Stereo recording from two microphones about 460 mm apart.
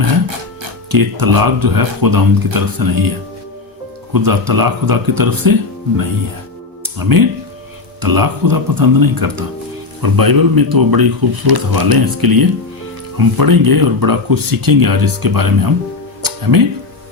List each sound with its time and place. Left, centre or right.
0.9 s speech: right
4.1 s speech: right
6.8 s speech: right